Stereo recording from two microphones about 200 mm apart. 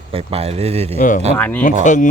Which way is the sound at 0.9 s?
40° left (ahead or behind).